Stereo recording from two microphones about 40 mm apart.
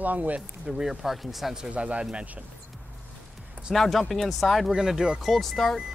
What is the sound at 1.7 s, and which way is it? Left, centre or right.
Speech, right.